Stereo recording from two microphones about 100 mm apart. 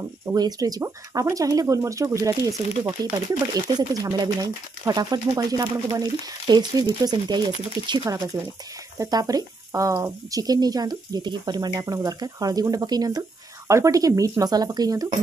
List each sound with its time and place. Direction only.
0.3 s speech: 40° right (ahead or behind)
8.9 s speech: 35° right (ahead or behind)
13.7 s speech: 30° right (ahead or behind)